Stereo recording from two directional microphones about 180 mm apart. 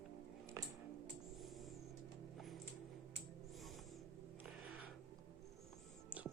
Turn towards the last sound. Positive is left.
turn(degrees=-10)  # may be behind; listen again after turning